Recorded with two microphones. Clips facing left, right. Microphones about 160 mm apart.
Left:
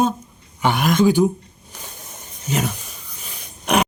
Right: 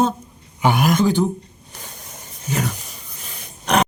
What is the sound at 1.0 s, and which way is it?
Speech, 10° left (ahead or behind).